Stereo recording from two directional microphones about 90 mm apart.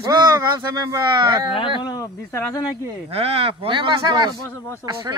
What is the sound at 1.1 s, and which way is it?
Speech, 55° right (ahead or behind).